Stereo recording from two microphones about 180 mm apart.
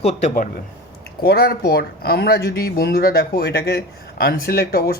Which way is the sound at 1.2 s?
60° left (ahead or behind).